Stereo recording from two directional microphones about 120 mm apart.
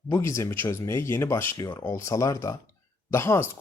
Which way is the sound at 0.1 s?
25° left (ahead or behind).